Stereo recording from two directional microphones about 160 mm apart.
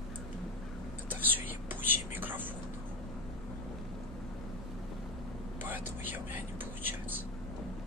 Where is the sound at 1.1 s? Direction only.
10° right (ahead or behind).